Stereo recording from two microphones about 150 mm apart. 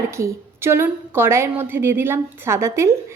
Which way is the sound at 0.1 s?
20° right (ahead or behind).